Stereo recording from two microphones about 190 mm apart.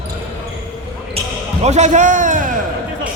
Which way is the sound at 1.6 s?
35° right (ahead or behind).